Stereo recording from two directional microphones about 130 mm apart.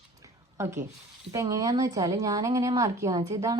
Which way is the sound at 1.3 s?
25° right (ahead or behind).